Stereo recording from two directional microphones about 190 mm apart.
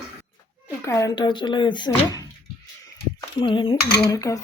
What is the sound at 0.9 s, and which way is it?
Speech, 15° left (ahead or behind).